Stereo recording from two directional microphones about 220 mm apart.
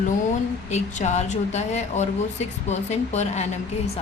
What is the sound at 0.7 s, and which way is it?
Speech, 30° left (ahead or behind).